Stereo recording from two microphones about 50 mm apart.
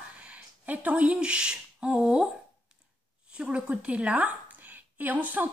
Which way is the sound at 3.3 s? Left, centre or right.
Right.